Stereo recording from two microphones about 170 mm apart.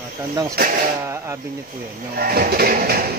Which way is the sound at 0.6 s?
65° right (ahead or behind).